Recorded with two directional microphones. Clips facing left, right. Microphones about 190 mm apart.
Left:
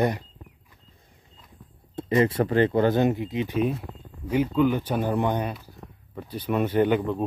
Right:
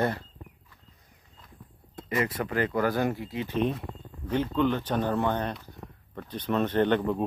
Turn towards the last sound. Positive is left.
turn(degrees=10)  # may be behind; listen again after turning